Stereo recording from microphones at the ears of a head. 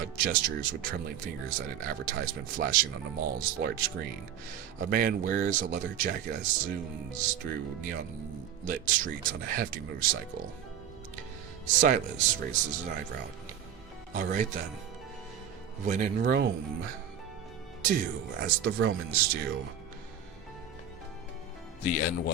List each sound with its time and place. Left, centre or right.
0.0 s speech: right
11.6 s speech: right
15.8 s speech: right
21.8 s speech: left